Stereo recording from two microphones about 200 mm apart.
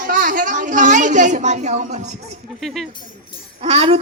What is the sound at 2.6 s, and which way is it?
Speech, centre (ahead or behind).